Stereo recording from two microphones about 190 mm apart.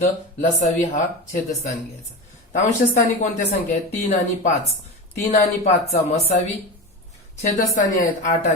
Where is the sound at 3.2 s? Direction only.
40° left (ahead or behind).